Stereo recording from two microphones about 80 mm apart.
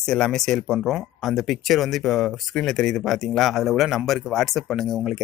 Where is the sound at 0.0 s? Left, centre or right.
Centre.